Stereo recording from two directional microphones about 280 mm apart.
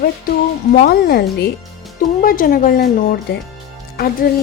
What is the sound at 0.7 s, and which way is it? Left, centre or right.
Speech, left.